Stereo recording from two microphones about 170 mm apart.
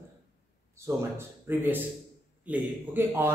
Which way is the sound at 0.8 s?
15° right (ahead or behind).